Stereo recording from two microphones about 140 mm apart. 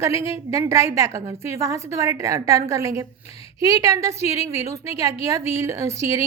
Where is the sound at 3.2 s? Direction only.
45° left (ahead or behind).